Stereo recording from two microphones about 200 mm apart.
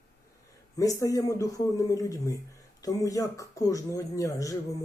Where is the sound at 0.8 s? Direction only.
15° left (ahead or behind).